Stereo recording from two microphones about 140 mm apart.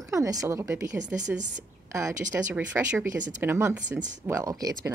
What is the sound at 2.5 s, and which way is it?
Speech, 15° right (ahead or behind).